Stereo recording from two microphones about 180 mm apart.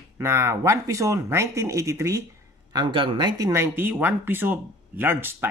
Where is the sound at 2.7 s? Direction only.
25° right (ahead or behind).